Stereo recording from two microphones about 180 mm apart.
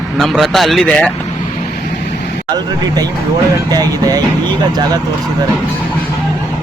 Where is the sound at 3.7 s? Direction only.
20° right (ahead or behind).